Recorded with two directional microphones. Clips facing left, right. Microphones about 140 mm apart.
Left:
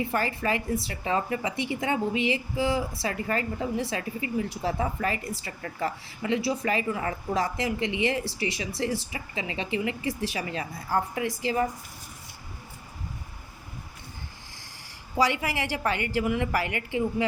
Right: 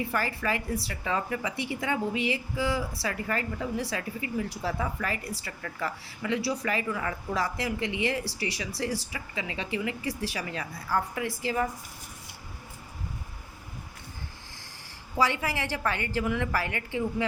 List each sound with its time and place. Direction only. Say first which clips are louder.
0.1 s a woman's voice: left 2 dB; 25° left (ahead or behind)
15.2 s a woman's voice: left 2 dB; 15° left (ahead or behind)